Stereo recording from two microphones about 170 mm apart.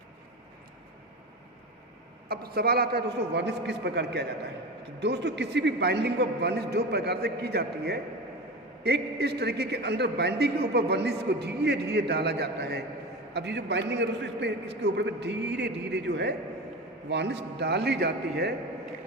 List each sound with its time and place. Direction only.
2.3 s a man's voice: 65° right (ahead or behind)
4.9 s a man's voice: 85° right
13.3 s a man's voice: 90° right